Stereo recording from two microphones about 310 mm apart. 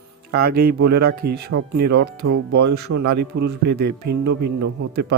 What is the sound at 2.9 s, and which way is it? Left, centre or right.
Speech, right.